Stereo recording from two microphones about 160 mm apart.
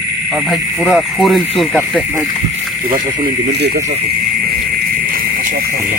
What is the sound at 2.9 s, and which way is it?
Speech, 75° right (ahead or behind).